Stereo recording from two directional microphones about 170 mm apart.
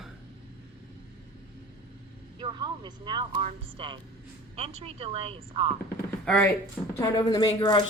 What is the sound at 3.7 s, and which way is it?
Speech, 30° right (ahead or behind).